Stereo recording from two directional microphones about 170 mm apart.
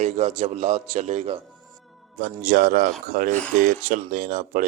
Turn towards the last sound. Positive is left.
turn(degrees=-55)  # may be behind; listen again after turning